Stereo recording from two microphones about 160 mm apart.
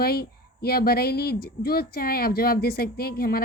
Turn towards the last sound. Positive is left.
turn(degrees=75)  # may be behind; listen again after turning